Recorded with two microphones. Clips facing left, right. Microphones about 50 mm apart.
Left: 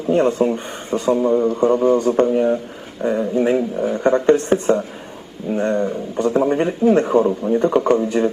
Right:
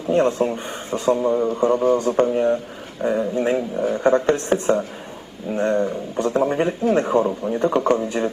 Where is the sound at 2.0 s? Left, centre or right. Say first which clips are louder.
Left 3 dB; centre.